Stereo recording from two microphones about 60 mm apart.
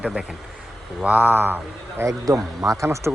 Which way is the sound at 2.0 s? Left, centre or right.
Right.